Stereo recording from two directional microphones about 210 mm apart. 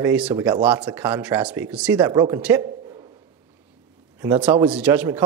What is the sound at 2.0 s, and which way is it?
Speech, 15° right (ahead or behind).